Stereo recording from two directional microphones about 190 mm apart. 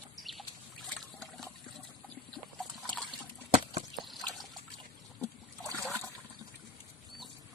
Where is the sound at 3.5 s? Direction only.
30° right (ahead or behind).